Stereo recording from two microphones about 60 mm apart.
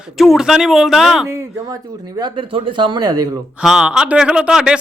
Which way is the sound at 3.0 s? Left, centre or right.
Right.